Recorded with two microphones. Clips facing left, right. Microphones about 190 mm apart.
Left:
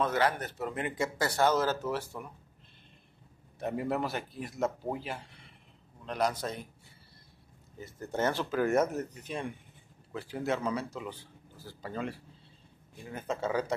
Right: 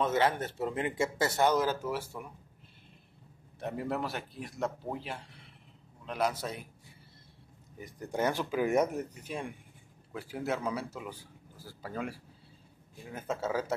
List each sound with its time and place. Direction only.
0.0 s speech: 25° right (ahead or behind)
3.5 s a man's voice: centre (ahead or behind)
7.8 s a man's voice: 15° right (ahead or behind)